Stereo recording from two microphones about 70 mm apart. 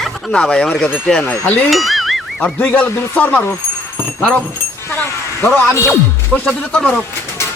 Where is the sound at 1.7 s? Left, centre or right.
Centre.